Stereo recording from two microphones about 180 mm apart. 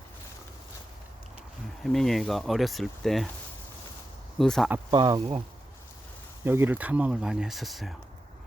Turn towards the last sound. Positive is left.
turn(degrees=0)  # may be behind; listen again after turning